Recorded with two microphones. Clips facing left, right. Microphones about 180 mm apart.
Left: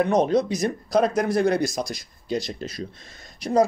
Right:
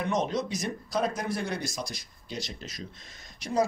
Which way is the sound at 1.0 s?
75° left (ahead or behind).